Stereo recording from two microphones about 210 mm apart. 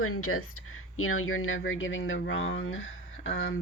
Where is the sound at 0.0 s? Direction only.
90° left.